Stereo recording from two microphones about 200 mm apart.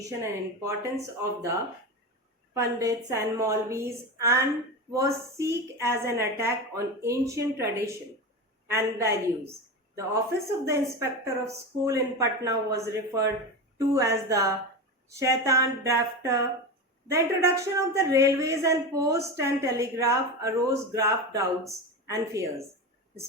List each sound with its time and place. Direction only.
0.2 s a woman's voice: 15° right (ahead or behind)
2.5 s a woman's voice: 15° right (ahead or behind)